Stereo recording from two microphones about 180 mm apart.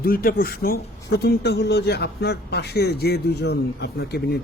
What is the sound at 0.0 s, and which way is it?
A man's voice, 55° left (ahead or behind).